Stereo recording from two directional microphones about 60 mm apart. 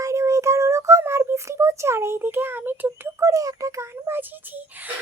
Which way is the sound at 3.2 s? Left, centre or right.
Right.